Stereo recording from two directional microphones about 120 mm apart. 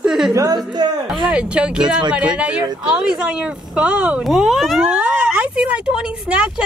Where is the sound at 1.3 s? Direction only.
10° right (ahead or behind).